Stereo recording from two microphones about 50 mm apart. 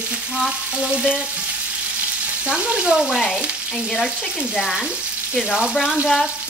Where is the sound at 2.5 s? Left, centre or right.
Centre.